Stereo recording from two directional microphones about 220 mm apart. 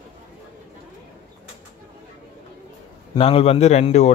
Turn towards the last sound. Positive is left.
turn(degrees=30)  # may be behind; listen again after turning